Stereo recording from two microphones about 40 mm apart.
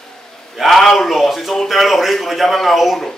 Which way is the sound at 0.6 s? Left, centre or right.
Centre.